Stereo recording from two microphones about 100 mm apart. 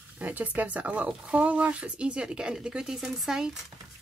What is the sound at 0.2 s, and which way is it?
Speech, 15° right (ahead or behind).